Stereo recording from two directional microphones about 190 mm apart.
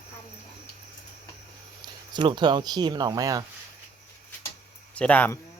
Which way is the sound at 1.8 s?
25° right (ahead or behind).